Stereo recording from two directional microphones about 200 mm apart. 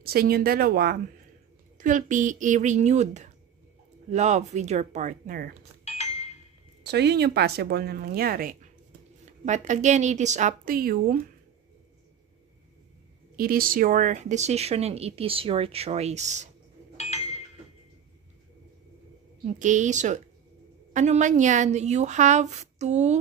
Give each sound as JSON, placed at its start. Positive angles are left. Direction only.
{"t": 0.0, "sound": "speech", "side_deg": -50}
{"t": 5.9, "sound": "a sound", "side_deg": 35}
{"t": 6.8, "sound": "speech", "side_deg": -55}
{"t": 13.4, "sound": "speech", "side_deg": -45}
{"t": 19.4, "sound": "speech", "side_deg": -40}